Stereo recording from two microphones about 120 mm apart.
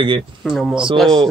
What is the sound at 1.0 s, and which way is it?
Speech, centre (ahead or behind).